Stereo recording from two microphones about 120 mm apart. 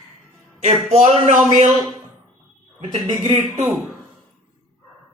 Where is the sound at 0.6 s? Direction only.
70° right (ahead or behind).